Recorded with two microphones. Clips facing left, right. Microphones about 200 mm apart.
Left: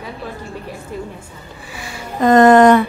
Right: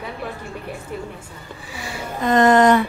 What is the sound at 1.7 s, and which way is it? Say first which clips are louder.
Music: left 5 dB; 50° left (ahead or behind).